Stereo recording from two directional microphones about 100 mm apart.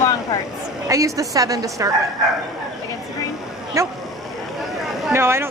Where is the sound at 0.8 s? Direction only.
30° right (ahead or behind).